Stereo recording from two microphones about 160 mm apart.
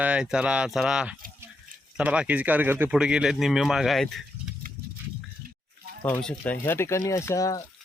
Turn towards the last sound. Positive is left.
turn(degrees=20)  # may be behind; listen again after turning